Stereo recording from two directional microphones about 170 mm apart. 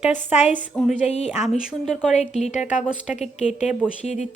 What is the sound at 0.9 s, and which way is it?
Speech, 45° left (ahead or behind).